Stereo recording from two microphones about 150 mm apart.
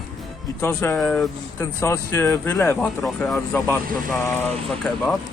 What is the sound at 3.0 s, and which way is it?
Mantra, centre (ahead or behind).